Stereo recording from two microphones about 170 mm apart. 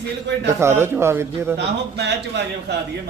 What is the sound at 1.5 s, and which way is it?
A man's voice, 90° right.